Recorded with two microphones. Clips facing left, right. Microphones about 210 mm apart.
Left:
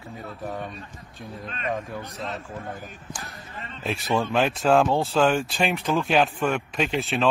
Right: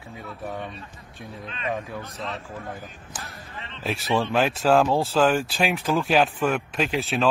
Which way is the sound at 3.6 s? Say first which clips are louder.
Left 1 dB; 45° left (ahead or behind).